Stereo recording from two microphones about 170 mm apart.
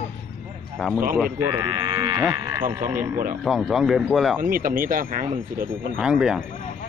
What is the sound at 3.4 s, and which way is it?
Speech, centre (ahead or behind).